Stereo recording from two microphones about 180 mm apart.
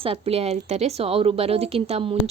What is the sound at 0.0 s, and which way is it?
Speech, 35° right (ahead or behind).